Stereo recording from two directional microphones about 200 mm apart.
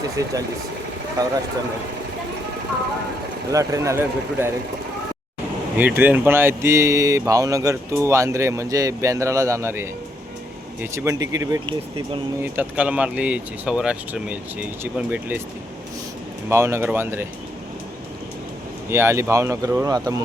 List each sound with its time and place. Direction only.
0.2 s speech: 15° right (ahead or behind)
3.5 s speech: 15° right (ahead or behind)
5.7 s speech: 10° right (ahead or behind)
10.9 s speech: 15° right (ahead or behind)
16.5 s speech: 15° right (ahead or behind)
18.9 s speech: 10° right (ahead or behind)